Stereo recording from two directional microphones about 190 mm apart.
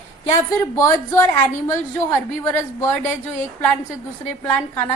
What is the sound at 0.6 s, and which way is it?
A woman's voice, 15° left (ahead or behind).